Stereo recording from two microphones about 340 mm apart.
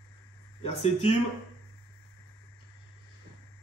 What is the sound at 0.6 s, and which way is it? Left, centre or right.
Speech, centre.